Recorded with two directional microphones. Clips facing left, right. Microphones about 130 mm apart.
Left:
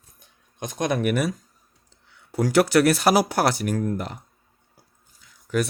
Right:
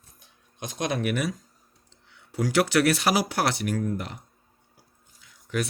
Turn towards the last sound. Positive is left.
turn(degrees=40)  # may be behind; listen again after turning